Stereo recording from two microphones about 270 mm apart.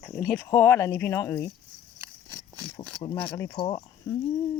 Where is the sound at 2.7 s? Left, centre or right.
Centre.